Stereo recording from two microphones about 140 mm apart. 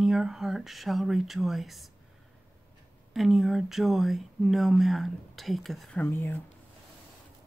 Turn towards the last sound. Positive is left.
turn(degrees=15)  # may be behind; listen again after turning